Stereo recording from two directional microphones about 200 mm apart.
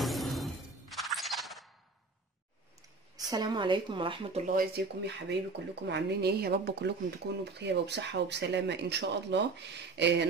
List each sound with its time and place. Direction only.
0.0 s music: centre (ahead or behind)
3.3 s speech: 20° right (ahead or behind)
4.5 s speech: 50° right (ahead or behind)